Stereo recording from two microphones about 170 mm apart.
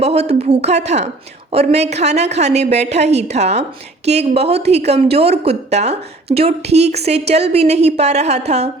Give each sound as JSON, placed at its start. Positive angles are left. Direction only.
{"t": 0.0, "sound": "a woman's voice", "side_deg": -40}